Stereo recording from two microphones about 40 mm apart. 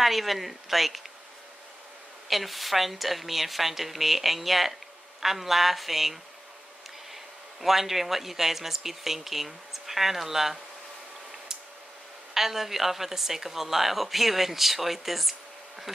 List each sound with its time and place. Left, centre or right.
0.0 s speech: centre
2.2 s speech: centre
7.6 s speech: centre
12.4 s speech: centre